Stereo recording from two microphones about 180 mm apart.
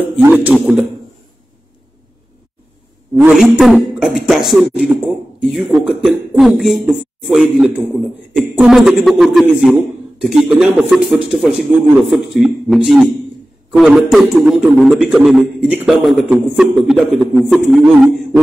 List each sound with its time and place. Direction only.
0.3 s a man's voice: 10° right (ahead or behind)
3.2 s a man's voice: centre (ahead or behind)